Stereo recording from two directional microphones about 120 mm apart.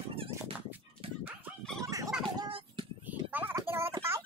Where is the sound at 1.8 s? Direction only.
30° right (ahead or behind).